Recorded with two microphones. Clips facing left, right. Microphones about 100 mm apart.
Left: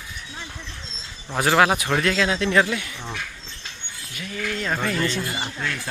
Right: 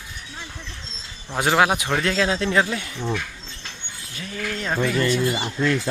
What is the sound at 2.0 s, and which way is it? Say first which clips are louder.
Speech: even; 30° right (ahead or behind).